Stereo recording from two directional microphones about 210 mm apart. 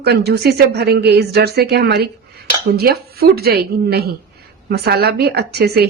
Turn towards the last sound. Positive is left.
turn(degrees=-50)  # may be behind; listen again after turning